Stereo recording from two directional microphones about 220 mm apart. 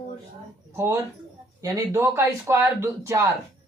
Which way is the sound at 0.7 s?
10° right (ahead or behind).